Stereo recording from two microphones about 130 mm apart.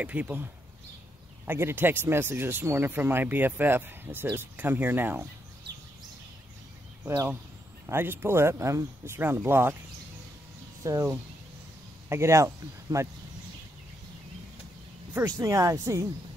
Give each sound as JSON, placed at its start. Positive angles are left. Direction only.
{"t": 0.0, "sound": "speech", "side_deg": -10}
{"t": 1.5, "sound": "speech", "side_deg": -15}
{"t": 7.1, "sound": "speech", "side_deg": -20}
{"t": 10.8, "sound": "speech", "side_deg": -25}
{"t": 15.1, "sound": "speech", "side_deg": -25}